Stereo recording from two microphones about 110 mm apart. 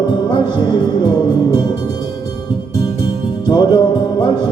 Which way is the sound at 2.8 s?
45° left (ahead or behind).